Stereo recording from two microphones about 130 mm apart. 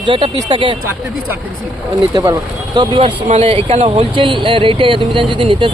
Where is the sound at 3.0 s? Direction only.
65° right (ahead or behind).